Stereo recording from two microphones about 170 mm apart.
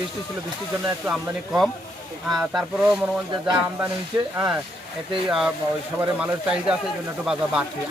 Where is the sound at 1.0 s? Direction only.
5° right (ahead or behind).